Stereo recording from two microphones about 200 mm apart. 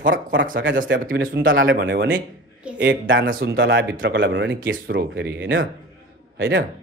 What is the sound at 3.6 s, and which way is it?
Speech, 65° right (ahead or behind).